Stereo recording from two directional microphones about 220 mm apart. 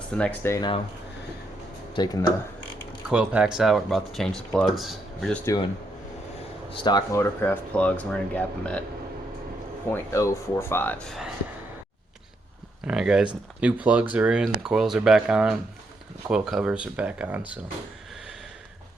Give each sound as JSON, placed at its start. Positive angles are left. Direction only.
{"t": 0.1, "sound": "speech", "side_deg": 5}
{"t": 2.0, "sound": "speech", "side_deg": 20}
{"t": 3.1, "sound": "speech", "side_deg": -5}
{"t": 6.7, "sound": "speech", "side_deg": 20}
{"t": 9.9, "sound": "speech", "side_deg": 10}
{"t": 12.8, "sound": "speech", "side_deg": -5}